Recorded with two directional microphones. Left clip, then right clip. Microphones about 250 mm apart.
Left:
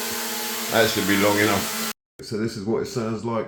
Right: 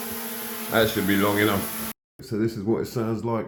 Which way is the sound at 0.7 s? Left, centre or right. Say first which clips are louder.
Left 2 dB; centre.